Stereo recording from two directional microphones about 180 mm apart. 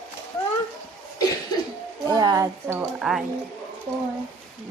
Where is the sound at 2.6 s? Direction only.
5° right (ahead or behind).